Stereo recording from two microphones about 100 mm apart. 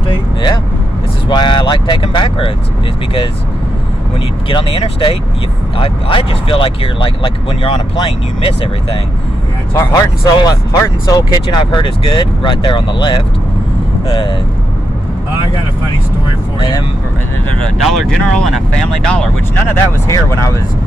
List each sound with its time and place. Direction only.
0.1 s vehicle: 50° left (ahead or behind)
1.3 s speech: 50° left (ahead or behind)
4.5 s speech: 60° left (ahead or behind)
9.8 s speech: 35° left (ahead or behind)
11.5 s speech: 50° left (ahead or behind)
17.7 s speech: centre (ahead or behind)
20.1 s speech: 30° left (ahead or behind)